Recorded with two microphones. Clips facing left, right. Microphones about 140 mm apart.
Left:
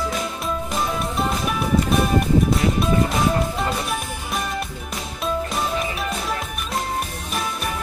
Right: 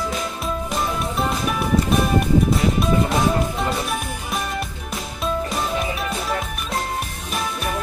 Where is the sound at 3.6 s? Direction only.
Centre (ahead or behind).